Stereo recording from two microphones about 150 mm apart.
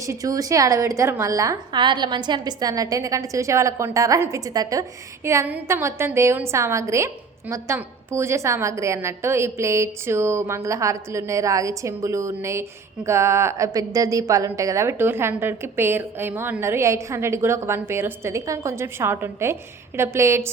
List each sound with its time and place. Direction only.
0.0 s a woman's voice: 20° right (ahead or behind)